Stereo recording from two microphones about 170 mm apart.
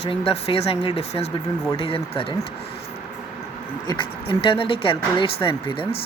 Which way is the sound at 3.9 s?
30° left (ahead or behind).